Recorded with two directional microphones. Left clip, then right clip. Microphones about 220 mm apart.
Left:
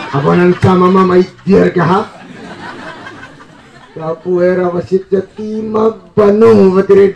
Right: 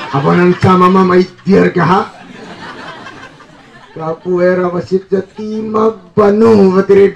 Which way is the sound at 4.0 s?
35° right (ahead or behind).